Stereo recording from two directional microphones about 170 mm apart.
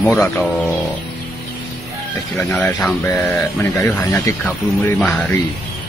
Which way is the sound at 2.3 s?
10° left (ahead or behind).